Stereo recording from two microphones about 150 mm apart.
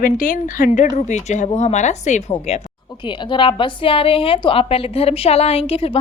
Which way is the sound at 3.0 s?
30° left (ahead or behind).